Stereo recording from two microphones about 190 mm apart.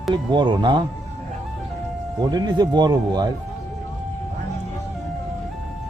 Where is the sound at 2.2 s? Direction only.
20° right (ahead or behind).